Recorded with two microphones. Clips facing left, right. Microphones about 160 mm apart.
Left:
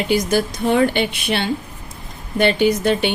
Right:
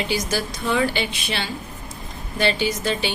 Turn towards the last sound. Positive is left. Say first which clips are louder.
# left 7 dB
turn(degrees=55)  # may be behind; listen again after turning